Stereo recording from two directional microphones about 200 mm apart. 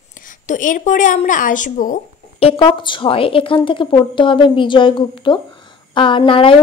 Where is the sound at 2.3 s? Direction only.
30° left (ahead or behind).